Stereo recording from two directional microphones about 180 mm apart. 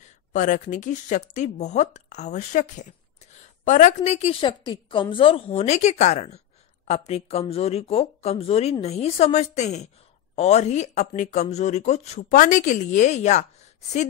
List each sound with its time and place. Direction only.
0.3 s speech: 45° left (ahead or behind)